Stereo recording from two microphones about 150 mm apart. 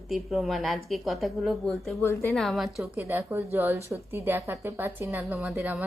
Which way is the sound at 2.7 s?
10° right (ahead or behind).